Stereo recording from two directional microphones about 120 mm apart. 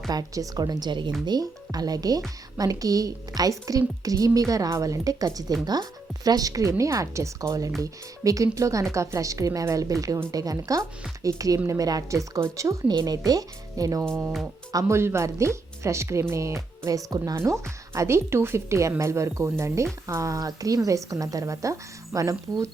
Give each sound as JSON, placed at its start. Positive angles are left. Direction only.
{"t": 0.1, "sound": "a woman's voice", "side_deg": -30}